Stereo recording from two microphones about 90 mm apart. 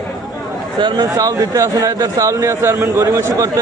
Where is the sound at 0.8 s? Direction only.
55° right (ahead or behind).